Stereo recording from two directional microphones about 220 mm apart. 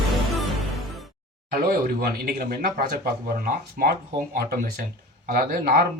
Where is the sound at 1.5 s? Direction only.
40° right (ahead or behind).